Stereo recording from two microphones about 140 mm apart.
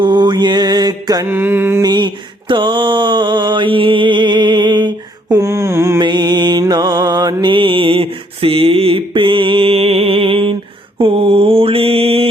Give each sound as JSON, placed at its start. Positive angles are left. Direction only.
{"t": 0.0, "sound": "mantra", "side_deg": -30}
{"t": 1.3, "sound": "mantra", "side_deg": -15}
{"t": 1.8, "sound": "mantra", "side_deg": -30}
{"t": 5.3, "sound": "mantra", "side_deg": -20}
{"t": 6.0, "sound": "mantra", "side_deg": -30}